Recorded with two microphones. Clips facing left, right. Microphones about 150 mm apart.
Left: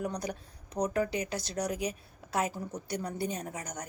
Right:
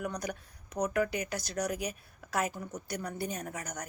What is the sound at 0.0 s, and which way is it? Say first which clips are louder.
Speech: left 1 dB; 30° left (ahead or behind).